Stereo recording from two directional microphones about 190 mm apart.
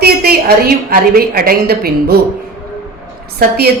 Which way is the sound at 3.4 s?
55° right (ahead or behind).